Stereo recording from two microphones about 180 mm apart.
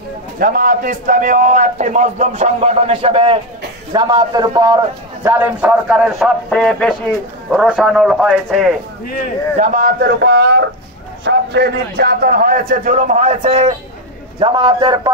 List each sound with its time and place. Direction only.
0.4 s a man's voice: 50° right (ahead or behind); by 4.7 s 20° right (ahead or behind)
5.2 s speech: 10° right (ahead or behind)
9.6 s a man's voice: 50° right (ahead or behind); by 15.0 s 25° right (ahead or behind)